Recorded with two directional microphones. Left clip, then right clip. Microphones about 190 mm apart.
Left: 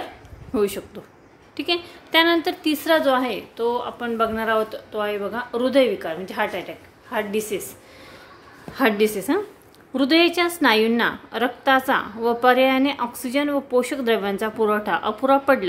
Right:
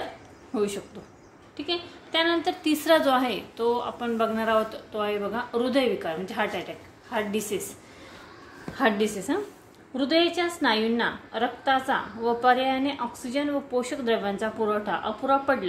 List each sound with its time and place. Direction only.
0.5 s a woman's voice: 30° left (ahead or behind)
1.6 s a woman's voice: 40° left (ahead or behind)
2.6 s a woman's voice: 15° left (ahead or behind)
8.7 s a woman's voice: 30° left (ahead or behind)